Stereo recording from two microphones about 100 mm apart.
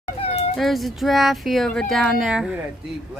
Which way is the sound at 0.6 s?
Centre (ahead or behind).